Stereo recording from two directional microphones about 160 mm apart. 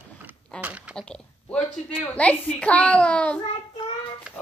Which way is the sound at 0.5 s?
10° right (ahead or behind).